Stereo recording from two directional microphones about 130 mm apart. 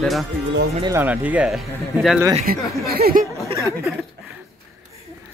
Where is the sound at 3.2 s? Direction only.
90° right.